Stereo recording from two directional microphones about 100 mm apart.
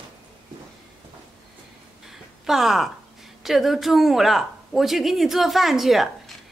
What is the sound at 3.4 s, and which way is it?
Speech, centre (ahead or behind).